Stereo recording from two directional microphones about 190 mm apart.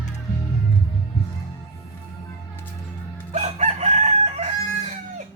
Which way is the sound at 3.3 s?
35° right (ahead or behind).